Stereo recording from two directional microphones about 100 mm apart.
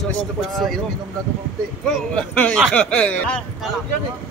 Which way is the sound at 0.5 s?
5° left (ahead or behind).